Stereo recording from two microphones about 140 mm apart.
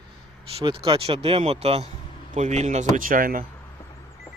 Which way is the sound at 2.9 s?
80° right.